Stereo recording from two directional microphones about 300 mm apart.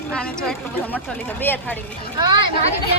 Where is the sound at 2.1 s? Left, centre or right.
Centre.